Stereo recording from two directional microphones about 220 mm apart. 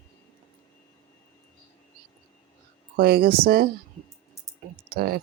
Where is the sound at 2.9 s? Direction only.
45° right (ahead or behind).